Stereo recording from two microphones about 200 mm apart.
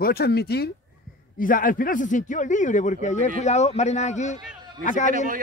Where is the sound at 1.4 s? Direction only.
40° left (ahead or behind).